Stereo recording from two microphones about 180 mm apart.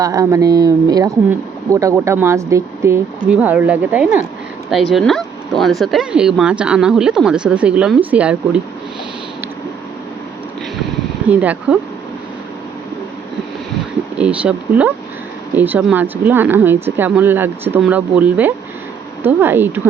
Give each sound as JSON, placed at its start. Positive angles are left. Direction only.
{"t": 0.0, "sound": "speech", "side_deg": -20}
{"t": 11.3, "sound": "speech", "side_deg": -5}
{"t": 14.2, "sound": "speech", "side_deg": -5}